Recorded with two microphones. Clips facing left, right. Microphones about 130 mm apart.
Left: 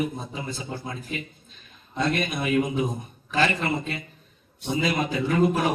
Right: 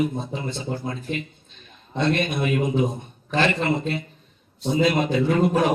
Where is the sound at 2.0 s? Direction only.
30° right (ahead or behind).